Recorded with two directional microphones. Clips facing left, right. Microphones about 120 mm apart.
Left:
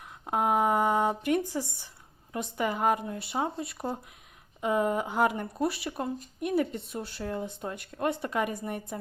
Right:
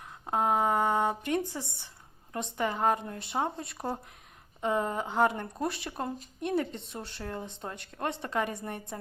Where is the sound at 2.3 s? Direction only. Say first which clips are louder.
Left 1 dB; 10° left (ahead or behind).